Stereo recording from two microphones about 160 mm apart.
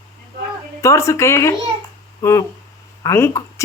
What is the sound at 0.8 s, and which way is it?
Speech, 20° left (ahead or behind).